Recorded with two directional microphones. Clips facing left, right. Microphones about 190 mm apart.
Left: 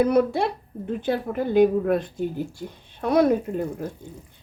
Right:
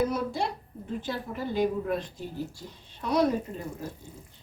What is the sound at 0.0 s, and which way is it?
Speech, 65° left (ahead or behind).